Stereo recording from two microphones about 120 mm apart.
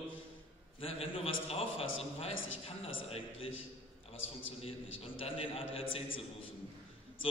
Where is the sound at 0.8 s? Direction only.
55° left (ahead or behind).